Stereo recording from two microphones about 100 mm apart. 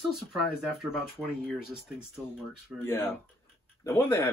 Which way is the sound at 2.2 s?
30° left (ahead or behind).